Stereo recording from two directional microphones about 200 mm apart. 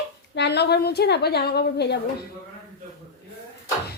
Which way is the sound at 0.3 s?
55° left (ahead or behind).